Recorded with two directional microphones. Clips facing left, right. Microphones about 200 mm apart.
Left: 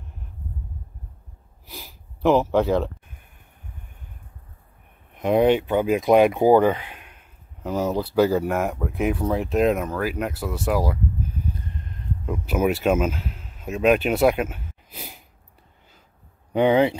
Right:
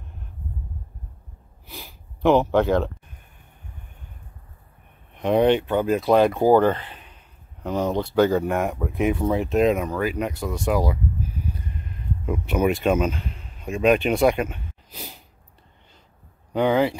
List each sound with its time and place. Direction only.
2.2 s speech: centre (ahead or behind)
5.1 s speech: 10° left (ahead or behind)
12.3 s speech: 5° left (ahead or behind)
16.5 s speech: 20° left (ahead or behind)